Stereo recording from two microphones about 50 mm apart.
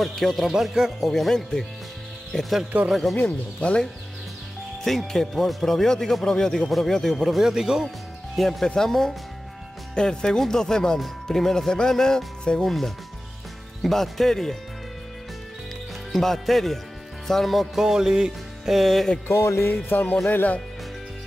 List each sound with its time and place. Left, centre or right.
0.0 s a man's voice: centre
0.5 s a man's voice: centre
1.1 s speech: centre
2.7 s speech: right
3.2 s speech: left
4.8 s a man's voice: centre
7.4 s music: centre
8.4 s a man's voice: centre
16.1 s speech: centre
17.3 s music: centre
18.8 s a man's voice: centre
19.2 s music: left
19.6 s speech: left